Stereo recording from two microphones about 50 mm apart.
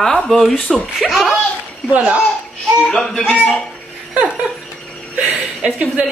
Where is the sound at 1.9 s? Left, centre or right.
Right.